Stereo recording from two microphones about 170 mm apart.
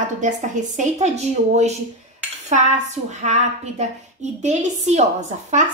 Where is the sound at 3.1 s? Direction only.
45° right (ahead or behind).